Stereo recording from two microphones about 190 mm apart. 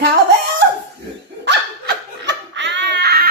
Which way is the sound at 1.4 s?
65° right (ahead or behind).